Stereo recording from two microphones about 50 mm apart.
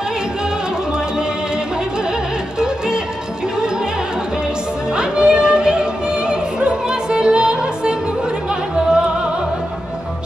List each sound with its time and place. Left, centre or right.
4.9 s music: centre